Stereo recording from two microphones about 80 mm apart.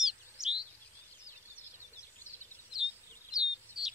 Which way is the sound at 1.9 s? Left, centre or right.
Left.